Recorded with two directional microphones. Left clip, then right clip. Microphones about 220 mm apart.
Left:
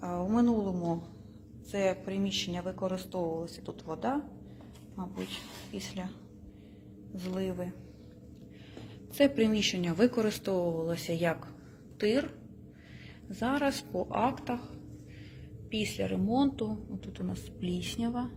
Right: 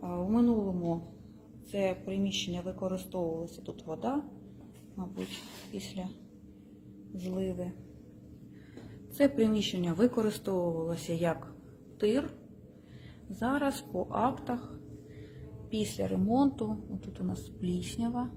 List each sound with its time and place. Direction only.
0.0 s a sound: centre (ahead or behind)
1.7 s a woman's voice: centre (ahead or behind)
5.1 s speech: 20° left (ahead or behind)
5.7 s a woman's voice: 5° right (ahead or behind)
7.2 s speech: 5° right (ahead or behind)
9.1 s a woman's voice: 5° right (ahead or behind)
13.4 s speech: 5° right (ahead or behind)
15.7 s speech: 15° right (ahead or behind)